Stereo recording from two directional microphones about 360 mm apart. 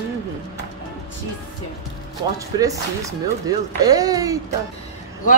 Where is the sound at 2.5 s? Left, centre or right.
Centre.